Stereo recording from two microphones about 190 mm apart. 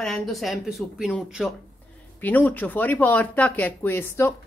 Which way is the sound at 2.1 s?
10° left (ahead or behind).